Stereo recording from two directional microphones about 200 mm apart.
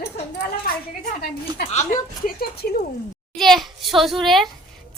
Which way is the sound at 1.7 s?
35° left (ahead or behind).